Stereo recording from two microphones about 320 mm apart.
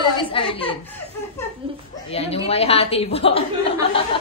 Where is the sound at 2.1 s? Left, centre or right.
Centre.